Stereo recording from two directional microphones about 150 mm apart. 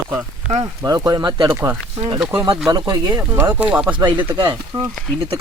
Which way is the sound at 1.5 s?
15° right (ahead or behind).